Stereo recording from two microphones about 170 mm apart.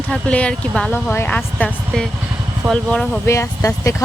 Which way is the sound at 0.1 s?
5° left (ahead or behind).